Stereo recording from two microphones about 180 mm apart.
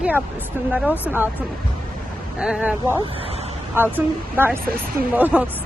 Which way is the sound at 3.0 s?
30° right (ahead or behind).